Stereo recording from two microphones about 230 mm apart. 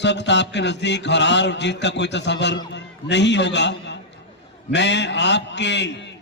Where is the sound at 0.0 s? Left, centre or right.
Left.